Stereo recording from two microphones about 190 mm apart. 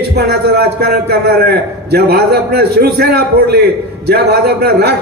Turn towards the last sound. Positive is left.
turn(degrees=-55)  # may be behind; listen again after turning